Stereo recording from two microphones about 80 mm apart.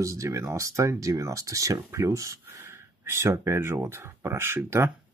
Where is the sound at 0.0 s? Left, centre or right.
Right.